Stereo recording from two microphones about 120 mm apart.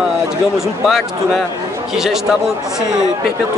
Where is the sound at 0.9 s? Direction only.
Centre (ahead or behind).